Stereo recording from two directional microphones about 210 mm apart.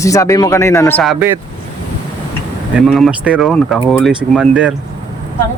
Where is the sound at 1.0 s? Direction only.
Centre (ahead or behind).